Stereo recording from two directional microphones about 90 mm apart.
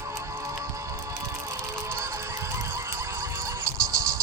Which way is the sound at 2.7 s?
35° right (ahead or behind).